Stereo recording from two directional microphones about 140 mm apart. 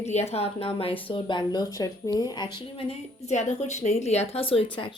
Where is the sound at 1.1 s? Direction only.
35° left (ahead or behind).